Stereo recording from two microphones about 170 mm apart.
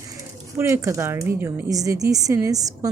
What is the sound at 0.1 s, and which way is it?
A woman's voice, 20° right (ahead or behind).